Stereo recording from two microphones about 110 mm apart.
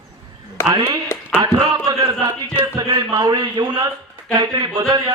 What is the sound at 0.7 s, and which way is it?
Speech, 35° right (ahead or behind).